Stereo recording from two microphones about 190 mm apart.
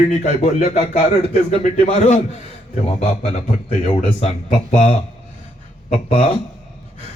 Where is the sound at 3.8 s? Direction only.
35° left (ahead or behind).